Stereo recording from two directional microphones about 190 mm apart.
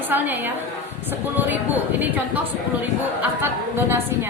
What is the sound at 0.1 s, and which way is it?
Speech, 10° right (ahead or behind).